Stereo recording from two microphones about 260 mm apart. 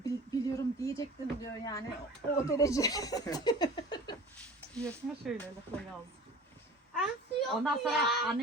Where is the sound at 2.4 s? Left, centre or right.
Centre.